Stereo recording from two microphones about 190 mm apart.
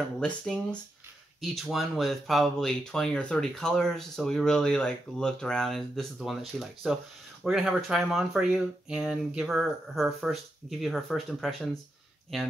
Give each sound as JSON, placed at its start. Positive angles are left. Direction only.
{"t": 0.2, "sound": "speech", "side_deg": 5}